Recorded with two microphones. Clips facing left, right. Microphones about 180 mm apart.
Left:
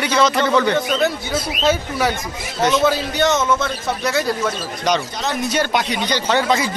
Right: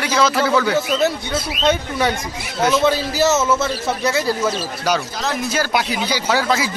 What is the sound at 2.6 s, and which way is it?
A man's voice, centre (ahead or behind).